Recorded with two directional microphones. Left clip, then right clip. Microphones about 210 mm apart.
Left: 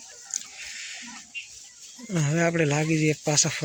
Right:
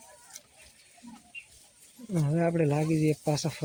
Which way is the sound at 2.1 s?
5° left (ahead or behind).